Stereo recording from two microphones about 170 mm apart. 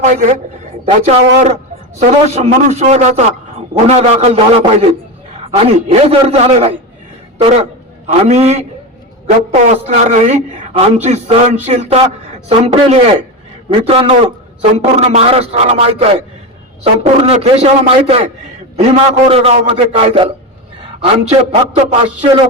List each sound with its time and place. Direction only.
0.0 s a man's voice: 50° right (ahead or behind)